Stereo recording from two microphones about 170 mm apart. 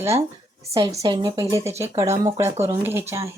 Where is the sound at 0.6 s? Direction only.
20° right (ahead or behind).